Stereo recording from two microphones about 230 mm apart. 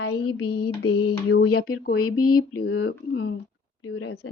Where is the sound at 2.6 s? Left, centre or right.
Left.